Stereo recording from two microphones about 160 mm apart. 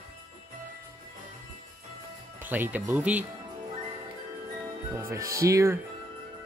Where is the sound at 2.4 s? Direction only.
10° right (ahead or behind).